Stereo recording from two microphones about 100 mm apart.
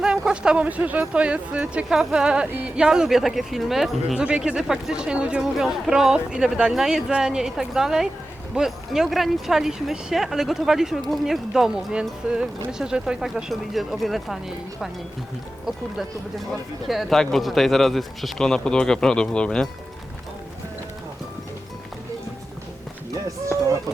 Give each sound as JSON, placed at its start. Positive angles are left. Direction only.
{"t": 0.0, "sound": "speech", "side_deg": -5}
{"t": 2.5, "sound": "speech", "side_deg": -20}
{"t": 2.7, "sound": "speech", "side_deg": -5}
{"t": 16.9, "sound": "speech", "side_deg": 0}